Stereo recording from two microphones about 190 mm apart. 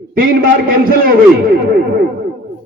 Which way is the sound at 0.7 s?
50° right (ahead or behind).